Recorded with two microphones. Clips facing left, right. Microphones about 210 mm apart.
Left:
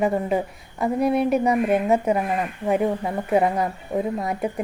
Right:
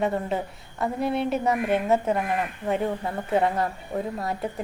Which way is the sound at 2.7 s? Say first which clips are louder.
Left 5 dB; 15° left (ahead or behind).